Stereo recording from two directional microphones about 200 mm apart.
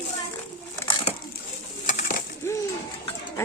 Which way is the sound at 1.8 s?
40° left (ahead or behind).